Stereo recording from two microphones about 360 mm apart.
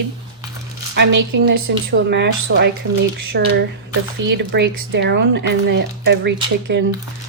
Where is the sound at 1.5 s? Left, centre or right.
Right.